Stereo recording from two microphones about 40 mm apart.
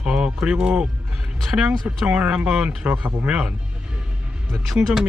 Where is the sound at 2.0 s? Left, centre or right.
Right.